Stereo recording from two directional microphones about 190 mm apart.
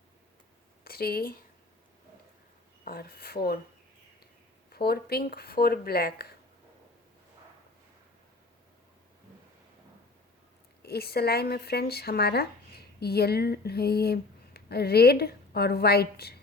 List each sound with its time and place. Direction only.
0.9 s speech: 55° left (ahead or behind)
2.8 s speech: 55° left (ahead or behind)
4.7 s speech: 55° left (ahead or behind)
10.8 s speech: 55° left (ahead or behind)